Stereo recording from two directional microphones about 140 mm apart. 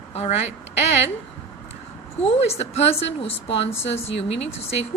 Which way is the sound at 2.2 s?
45° left (ahead or behind).